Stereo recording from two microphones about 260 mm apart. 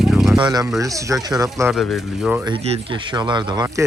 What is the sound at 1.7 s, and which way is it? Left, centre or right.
Speech, centre.